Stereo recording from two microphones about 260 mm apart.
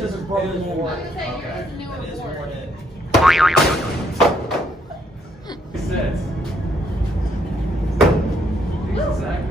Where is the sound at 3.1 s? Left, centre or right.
Centre.